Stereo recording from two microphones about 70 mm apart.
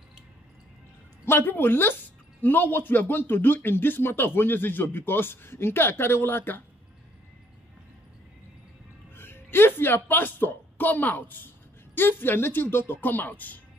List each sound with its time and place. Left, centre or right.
1.2 s speech: left
9.1 s a woman's voice: left